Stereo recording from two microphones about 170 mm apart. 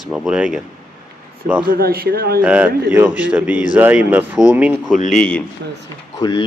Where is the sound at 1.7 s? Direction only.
60° right (ahead or behind).